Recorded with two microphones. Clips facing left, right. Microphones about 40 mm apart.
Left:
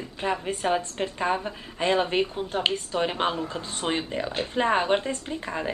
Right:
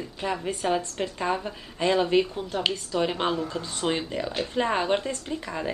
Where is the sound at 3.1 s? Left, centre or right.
Left.